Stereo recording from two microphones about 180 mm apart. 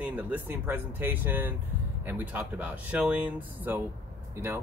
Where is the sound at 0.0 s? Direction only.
10° right (ahead or behind).